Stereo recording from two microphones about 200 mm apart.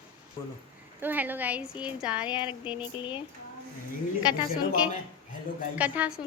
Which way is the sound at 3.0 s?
25° left (ahead or behind).